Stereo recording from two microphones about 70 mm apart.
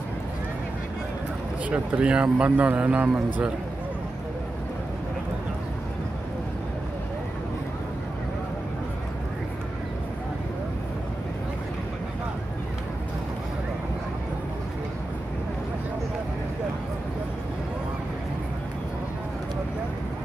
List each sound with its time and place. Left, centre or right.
1.7 s speech: centre